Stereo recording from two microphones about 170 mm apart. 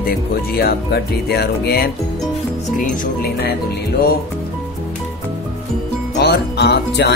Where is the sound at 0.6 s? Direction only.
70° left (ahead or behind).